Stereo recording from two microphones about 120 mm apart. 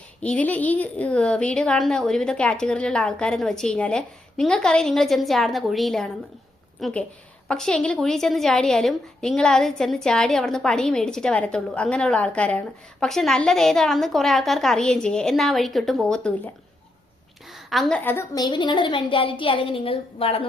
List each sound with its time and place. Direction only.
0.2 s a woman's voice: 10° left (ahead or behind)
17.5 s a sound: centre (ahead or behind)
18.0 s a woman's voice: 15° left (ahead or behind)
18.3 s a woman's voice: 40° left (ahead or behind)